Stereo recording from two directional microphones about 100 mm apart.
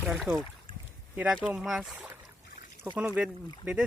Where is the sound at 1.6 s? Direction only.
5° right (ahead or behind).